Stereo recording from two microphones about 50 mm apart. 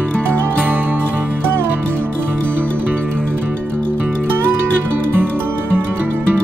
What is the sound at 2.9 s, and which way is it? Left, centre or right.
Music, left.